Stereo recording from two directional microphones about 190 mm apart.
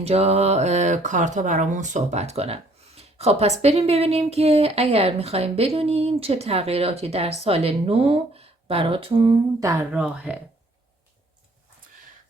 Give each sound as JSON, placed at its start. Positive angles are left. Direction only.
{"t": 0.0, "sound": "speech", "side_deg": -35}
{"t": 9.9, "sound": "speech", "side_deg": -5}